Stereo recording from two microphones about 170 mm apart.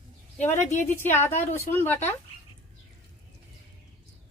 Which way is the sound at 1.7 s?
15° left (ahead or behind).